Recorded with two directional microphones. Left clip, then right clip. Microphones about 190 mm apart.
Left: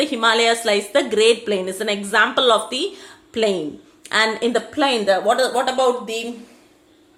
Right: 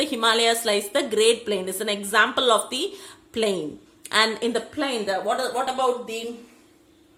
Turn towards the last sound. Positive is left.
turn(degrees=10)  # may be behind; listen again after turning